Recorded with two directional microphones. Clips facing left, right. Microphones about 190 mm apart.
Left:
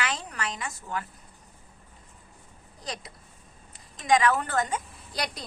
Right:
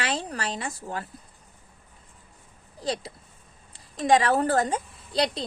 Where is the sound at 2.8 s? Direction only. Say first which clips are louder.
Right 8 dB; 30° right (ahead or behind).